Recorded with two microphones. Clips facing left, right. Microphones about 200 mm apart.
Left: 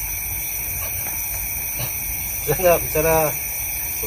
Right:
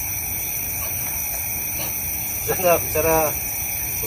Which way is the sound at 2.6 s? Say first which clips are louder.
Left 2 dB; centre (ahead or behind).